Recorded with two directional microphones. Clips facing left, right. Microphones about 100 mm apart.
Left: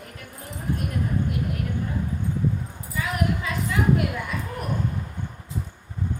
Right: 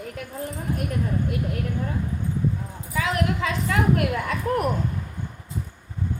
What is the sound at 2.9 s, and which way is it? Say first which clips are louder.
Speech: right 2 dB; 90° right.